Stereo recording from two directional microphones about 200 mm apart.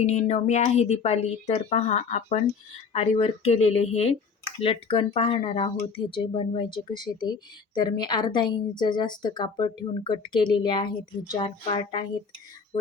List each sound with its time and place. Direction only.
0.0 s speech: 35° left (ahead or behind)